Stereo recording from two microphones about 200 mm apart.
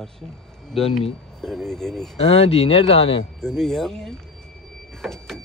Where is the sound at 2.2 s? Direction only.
30° left (ahead or behind).